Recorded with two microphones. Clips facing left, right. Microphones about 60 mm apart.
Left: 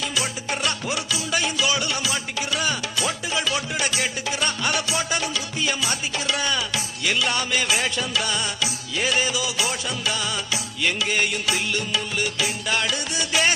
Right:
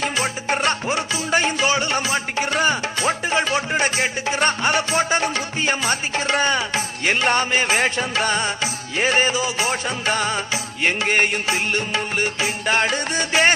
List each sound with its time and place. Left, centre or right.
0.0 s music: right